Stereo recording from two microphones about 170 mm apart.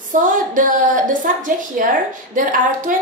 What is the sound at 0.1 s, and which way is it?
A woman's voice, 50° right (ahead or behind).